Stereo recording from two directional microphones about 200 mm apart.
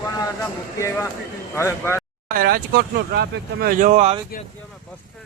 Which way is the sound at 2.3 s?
45° right (ahead or behind).